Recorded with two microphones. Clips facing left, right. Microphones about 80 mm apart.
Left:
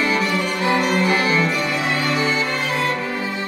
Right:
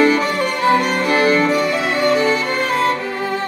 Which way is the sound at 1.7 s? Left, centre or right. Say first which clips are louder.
Right 5 dB; right.